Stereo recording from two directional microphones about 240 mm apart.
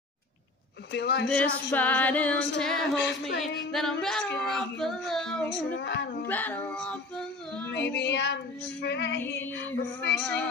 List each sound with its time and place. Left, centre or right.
0.9 s female singing: left
1.2 s female singing: centre
3.3 s speech: centre
5.8 s female singing: left
6.2 s female singing: centre
7.7 s female singing: left
9.2 s female singing: centre
9.5 s female singing: left
10.2 s speech: centre